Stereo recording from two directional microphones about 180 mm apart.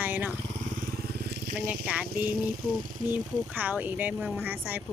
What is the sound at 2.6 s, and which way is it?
Speech, 50° right (ahead or behind).